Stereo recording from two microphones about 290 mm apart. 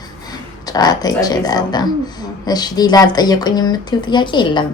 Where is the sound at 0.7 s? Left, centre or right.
Centre.